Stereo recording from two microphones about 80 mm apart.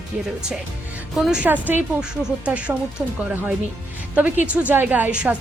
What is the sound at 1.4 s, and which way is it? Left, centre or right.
Speech, right.